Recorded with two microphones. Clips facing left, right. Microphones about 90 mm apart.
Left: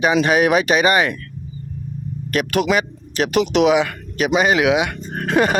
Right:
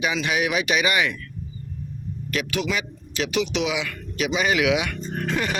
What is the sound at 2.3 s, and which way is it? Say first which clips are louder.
Speech: left 8 dB; 50° left (ahead or behind).